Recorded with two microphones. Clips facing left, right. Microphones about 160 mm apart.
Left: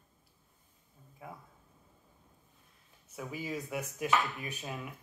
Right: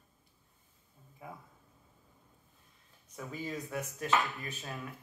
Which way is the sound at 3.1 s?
10° left (ahead or behind).